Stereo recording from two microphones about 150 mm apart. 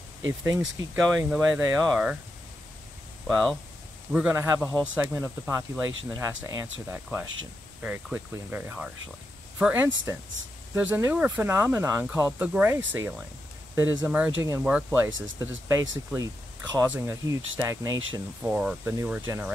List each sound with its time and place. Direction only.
0.3 s speech: 20° right (ahead or behind)
0.6 s speech: 5° right (ahead or behind)
3.3 s speech: centre (ahead or behind); by 18.2 s 20° right (ahead or behind)
18.4 s speech: 10° right (ahead or behind)